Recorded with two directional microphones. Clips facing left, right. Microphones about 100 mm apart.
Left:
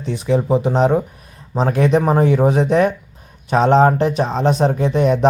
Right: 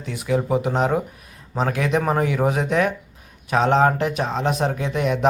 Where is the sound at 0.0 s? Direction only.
30° left (ahead or behind).